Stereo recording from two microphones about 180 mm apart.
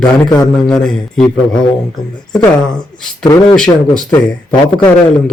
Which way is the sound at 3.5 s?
5° left (ahead or behind).